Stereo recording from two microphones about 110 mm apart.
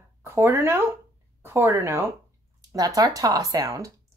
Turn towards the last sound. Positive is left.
turn(degrees=-30)  # may be behind; listen again after turning